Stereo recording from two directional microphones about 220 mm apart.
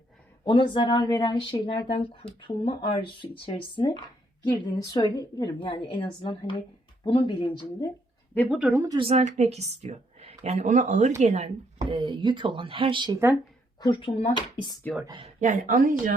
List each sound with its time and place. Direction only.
0.4 s speech: 20° left (ahead or behind)
8.4 s a woman's voice: 5° right (ahead or behind)
13.7 s speech: 20° left (ahead or behind)
15.0 s a woman's voice: 20° right (ahead or behind)
15.4 s speech: 35° right (ahead or behind)